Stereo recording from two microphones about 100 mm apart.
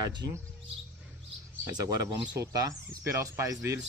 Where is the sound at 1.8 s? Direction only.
35° right (ahead or behind).